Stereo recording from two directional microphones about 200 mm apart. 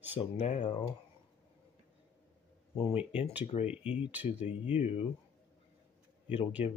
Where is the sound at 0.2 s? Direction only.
35° left (ahead or behind).